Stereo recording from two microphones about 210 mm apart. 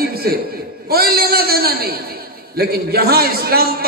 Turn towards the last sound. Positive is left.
turn(degrees=-45)  # may be behind; listen again after turning